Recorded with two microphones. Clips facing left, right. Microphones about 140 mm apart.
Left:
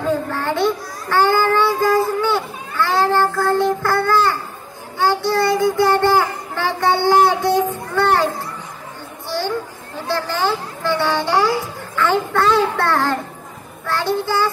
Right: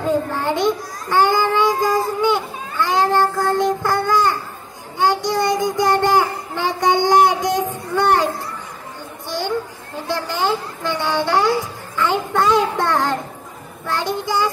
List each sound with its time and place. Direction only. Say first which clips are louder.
0.1 s child singing: right 2 dB; 15° right (ahead or behind)
7.9 s children playing: right 1 dB; 15° right (ahead or behind)
10.0 s a sound: left 1 dB; 15° right (ahead or behind)
13.8 s child singing: left 2 dB; 15° right (ahead or behind)